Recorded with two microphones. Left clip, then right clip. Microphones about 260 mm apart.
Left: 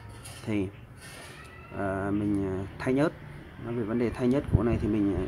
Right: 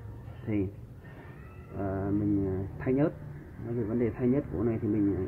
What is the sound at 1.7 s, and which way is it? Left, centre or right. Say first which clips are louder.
Speech: left 2 dB; left.